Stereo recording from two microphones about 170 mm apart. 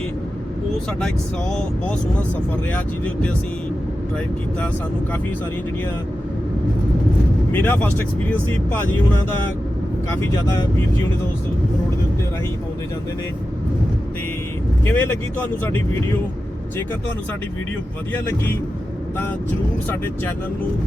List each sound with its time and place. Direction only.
2.7 s speech: 5° left (ahead or behind)
7.5 s speech: 10° left (ahead or behind)
10.2 s speech: 20° left (ahead or behind)
14.8 s speech: 10° left (ahead or behind)